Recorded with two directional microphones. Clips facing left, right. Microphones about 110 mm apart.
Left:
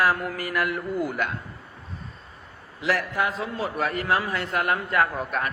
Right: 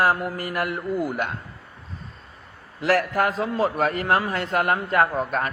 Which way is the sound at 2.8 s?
45° right (ahead or behind).